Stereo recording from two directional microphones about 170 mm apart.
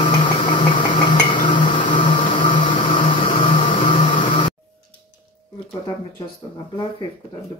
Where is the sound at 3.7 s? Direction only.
30° left (ahead or behind).